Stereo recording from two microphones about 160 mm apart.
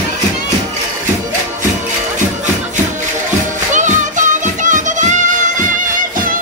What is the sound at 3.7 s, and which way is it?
Music, 50° right (ahead or behind).